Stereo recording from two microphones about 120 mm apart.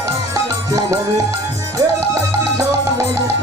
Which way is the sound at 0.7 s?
30° right (ahead or behind).